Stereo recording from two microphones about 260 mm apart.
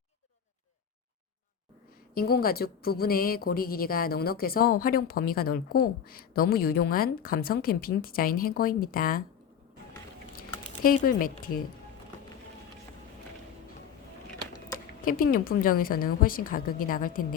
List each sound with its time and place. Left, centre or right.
2.1 s a woman's voice: left
10.8 s a woman's voice: left
15.0 s a woman's voice: left